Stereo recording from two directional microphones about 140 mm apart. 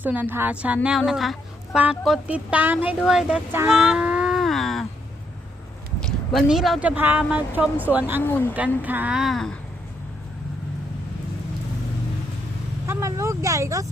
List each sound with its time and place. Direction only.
0.0 s speech: 15° right (ahead or behind)
3.7 s a sound: 5° right (ahead or behind)
6.0 s speech: centre (ahead or behind)
8.2 s speech: 15° left (ahead or behind)
8.8 s speech: 10° right (ahead or behind)
12.9 s vehicle: 20° right (ahead or behind)